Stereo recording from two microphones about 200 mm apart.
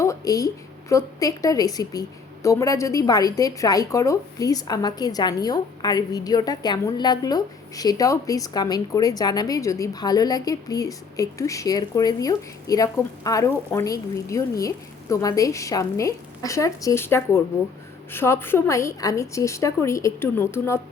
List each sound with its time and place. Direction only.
0.0 s a woman's voice: 15° left (ahead or behind)